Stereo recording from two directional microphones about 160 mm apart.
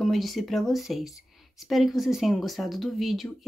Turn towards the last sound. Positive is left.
turn(degrees=0)  # may be behind; listen again after turning